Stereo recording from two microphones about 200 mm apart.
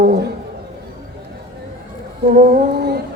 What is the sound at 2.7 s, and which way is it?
Music, 55° right (ahead or behind).